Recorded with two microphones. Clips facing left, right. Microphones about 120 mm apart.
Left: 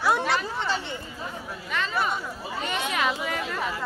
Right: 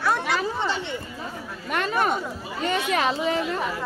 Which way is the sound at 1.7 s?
55° right (ahead or behind).